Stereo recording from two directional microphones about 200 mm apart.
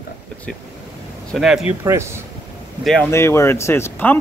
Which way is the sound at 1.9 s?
15° right (ahead or behind).